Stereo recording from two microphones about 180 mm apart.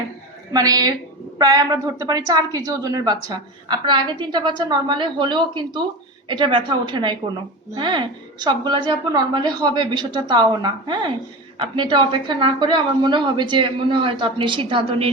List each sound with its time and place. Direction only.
0.5 s a woman's voice: 20° right (ahead or behind)